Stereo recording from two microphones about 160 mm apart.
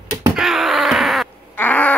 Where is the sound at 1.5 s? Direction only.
10° left (ahead or behind).